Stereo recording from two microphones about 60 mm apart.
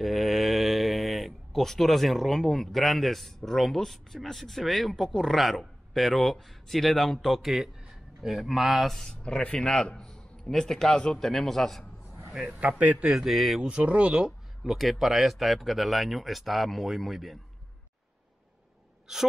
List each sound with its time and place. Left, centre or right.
0.0 s speech: centre
9.1 s a man's voice: centre
12.4 s speech: right
13.0 s speech: centre
13.6 s speech: centre
14.6 s speech: centre
19.1 s gasp: centre